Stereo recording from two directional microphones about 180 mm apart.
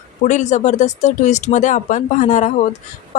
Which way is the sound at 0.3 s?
40° left (ahead or behind).